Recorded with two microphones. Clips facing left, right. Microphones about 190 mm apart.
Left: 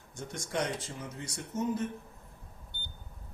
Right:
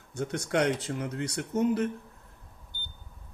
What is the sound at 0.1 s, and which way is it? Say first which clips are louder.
Speech: right 8 dB; 70° right (ahead or behind).